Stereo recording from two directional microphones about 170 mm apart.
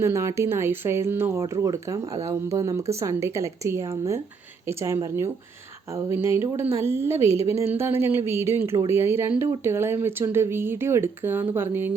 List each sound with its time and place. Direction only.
0.0 s speech: 15° right (ahead or behind)